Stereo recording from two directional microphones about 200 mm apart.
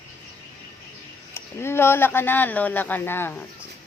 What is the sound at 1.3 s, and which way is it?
Speech, 10° left (ahead or behind).